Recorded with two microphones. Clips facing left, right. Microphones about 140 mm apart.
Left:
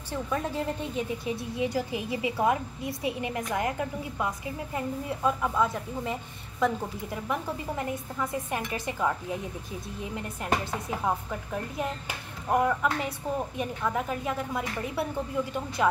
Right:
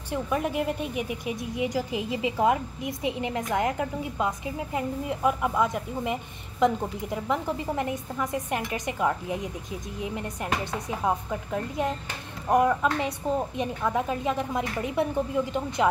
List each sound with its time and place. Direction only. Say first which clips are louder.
0.1 s speech: right 3 dB; 15° right (ahead or behind)